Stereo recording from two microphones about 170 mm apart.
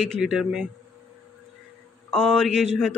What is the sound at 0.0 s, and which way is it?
Speech, centre (ahead or behind).